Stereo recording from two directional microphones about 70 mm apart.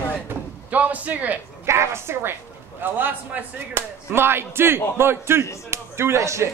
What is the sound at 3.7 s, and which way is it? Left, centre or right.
Speech, right.